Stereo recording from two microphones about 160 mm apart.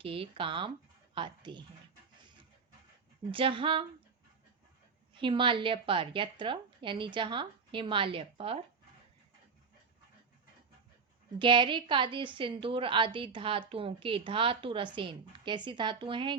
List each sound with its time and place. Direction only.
0.0 s a woman's voice: 35° right (ahead or behind)
3.3 s a woman's voice: 35° right (ahead or behind)
5.1 s a woman's voice: 30° right (ahead or behind)
11.3 s a woman's voice: 30° right (ahead or behind)